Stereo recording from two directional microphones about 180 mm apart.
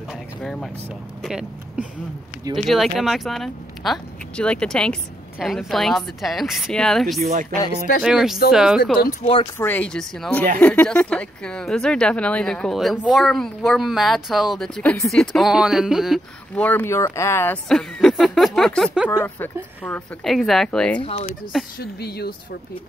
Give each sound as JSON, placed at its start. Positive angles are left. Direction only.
{"t": 0.1, "sound": "vehicle", "side_deg": 0}
{"t": 1.2, "sound": "speech", "side_deg": -5}
{"t": 7.2, "sound": "speech", "side_deg": -60}
{"t": 8.0, "sound": "speech", "side_deg": 0}
{"t": 9.2, "sound": "speech", "side_deg": 30}
{"t": 9.6, "sound": "speech", "side_deg": 10}
{"t": 16.6, "sound": "speech", "side_deg": 10}
{"t": 21.0, "sound": "speech", "side_deg": 35}
{"t": 21.7, "sound": "speech", "side_deg": 60}